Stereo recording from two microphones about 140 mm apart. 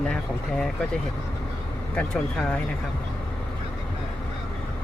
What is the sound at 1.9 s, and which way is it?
Speech, 5° left (ahead or behind).